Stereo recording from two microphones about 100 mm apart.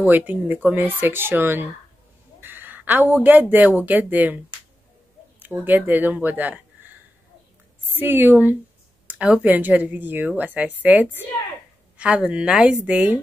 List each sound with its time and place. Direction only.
0.0 s speech: 15° right (ahead or behind)
5.4 s speech: 20° right (ahead or behind)